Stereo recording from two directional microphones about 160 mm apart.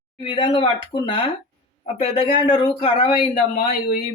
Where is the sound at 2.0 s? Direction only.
35° left (ahead or behind).